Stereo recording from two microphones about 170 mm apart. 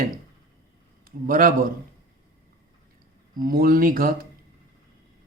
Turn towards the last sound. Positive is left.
turn(degrees=-60)  # may be behind; listen again after turning